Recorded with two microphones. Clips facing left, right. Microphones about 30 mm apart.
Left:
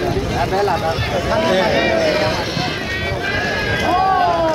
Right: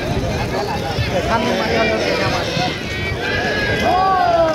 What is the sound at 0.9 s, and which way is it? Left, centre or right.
Run, centre.